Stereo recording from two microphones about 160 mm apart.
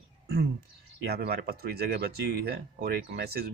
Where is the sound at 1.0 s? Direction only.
85° right.